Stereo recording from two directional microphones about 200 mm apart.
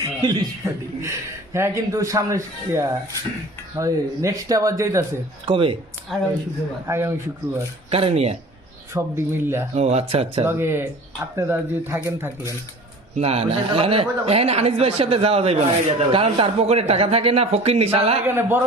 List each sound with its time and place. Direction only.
0.0 s speech: 20° right (ahead or behind)
5.5 s speech: 25° right (ahead or behind)
6.1 s speech: centre (ahead or behind)
6.8 s speech: 15° right (ahead or behind)
7.9 s speech: 30° right (ahead or behind)
8.9 s speech: 10° right (ahead or behind)
9.7 s speech: 30° right (ahead or behind)
10.4 s speech: 10° right (ahead or behind)
13.1 s speech: 30° right (ahead or behind)
18.3 s speech: 10° right (ahead or behind)